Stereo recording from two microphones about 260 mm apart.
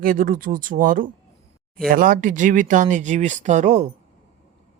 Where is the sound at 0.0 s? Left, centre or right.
Right.